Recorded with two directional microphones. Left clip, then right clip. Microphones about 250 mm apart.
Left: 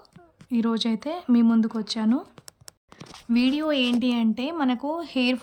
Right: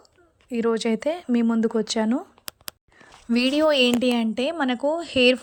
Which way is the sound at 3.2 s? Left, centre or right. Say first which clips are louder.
Right 4 dB; centre.